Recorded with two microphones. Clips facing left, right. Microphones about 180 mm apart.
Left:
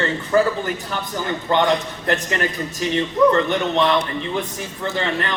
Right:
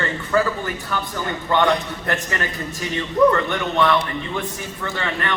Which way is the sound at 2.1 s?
20° left (ahead or behind).